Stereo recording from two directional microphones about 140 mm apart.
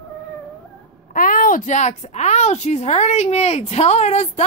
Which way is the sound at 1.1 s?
75° left (ahead or behind).